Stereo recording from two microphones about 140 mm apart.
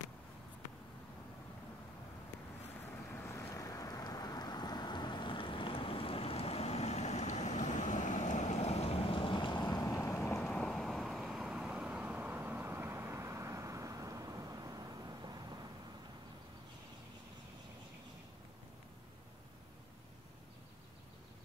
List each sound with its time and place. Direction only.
3.1 s boat: 20° left (ahead or behind)
10.4 s vehicle: 5° left (ahead or behind); by 15.6 s 30° right (ahead or behind)